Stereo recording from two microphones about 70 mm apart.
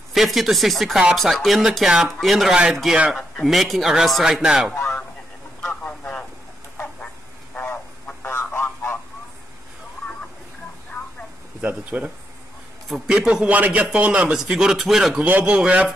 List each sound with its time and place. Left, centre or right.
0.1 s a man's voice: centre
4.7 s a sound: centre
7.5 s a sound: left
11.6 s speech: centre
12.8 s a man's voice: centre
13.5 s a man's voice: right
14.3 s speech: centre
15.1 s speech: right